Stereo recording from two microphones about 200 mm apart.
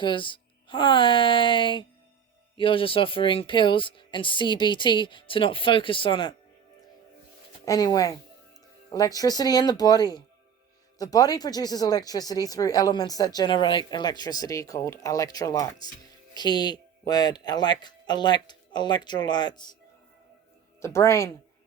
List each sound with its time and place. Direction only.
0.0 s speech: 25° left (ahead or behind)
7.6 s speech: 20° left (ahead or behind)
20.8 s speech: 15° left (ahead or behind)